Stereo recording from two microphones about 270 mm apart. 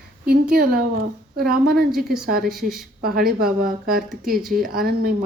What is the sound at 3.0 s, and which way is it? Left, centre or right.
Speech, right.